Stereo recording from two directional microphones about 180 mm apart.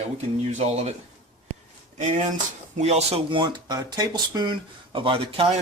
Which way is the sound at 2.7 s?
35° right (ahead or behind).